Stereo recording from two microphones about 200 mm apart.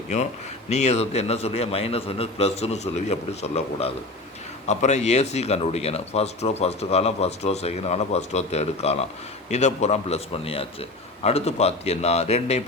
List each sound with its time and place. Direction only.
0.7 s speech: 35° left (ahead or behind)